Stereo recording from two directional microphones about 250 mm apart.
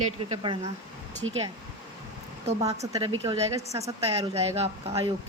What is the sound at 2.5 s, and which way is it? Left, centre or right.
Speech, right.